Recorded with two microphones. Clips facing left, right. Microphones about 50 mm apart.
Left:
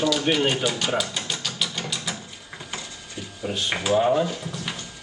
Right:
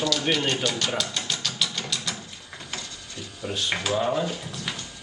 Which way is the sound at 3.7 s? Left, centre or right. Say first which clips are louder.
Left 5 dB; centre.